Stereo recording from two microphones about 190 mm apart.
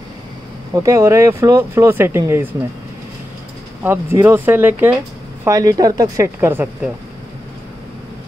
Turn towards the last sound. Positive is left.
turn(degrees=-10)  # may be behind; listen again after turning